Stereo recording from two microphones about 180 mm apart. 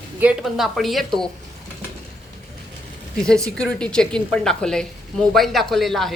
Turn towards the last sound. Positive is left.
turn(degrees=0)  # may be behind; listen again after turning